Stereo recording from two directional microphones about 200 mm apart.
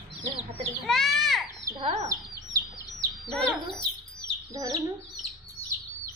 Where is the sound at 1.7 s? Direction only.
25° right (ahead or behind).